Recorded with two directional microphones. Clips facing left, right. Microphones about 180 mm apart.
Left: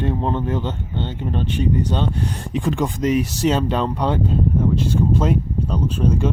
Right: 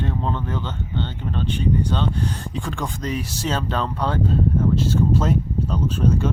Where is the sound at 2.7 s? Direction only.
20° left (ahead or behind).